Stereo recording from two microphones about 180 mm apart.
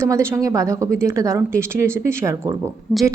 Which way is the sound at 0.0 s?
15° right (ahead or behind).